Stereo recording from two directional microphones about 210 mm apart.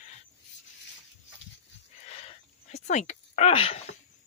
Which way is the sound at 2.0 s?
30° left (ahead or behind).